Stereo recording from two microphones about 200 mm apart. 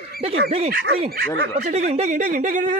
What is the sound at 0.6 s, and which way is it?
Speech, 50° right (ahead or behind).